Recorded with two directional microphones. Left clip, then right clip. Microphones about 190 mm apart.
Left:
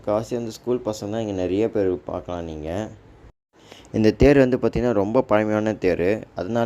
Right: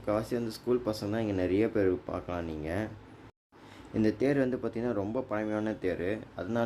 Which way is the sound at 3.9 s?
40° left (ahead or behind).